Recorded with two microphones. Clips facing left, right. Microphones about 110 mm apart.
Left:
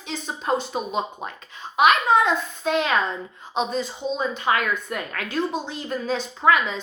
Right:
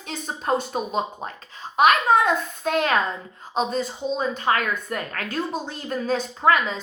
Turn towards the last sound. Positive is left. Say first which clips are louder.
# even
turn(degrees=-40)  # may be behind; listen again after turning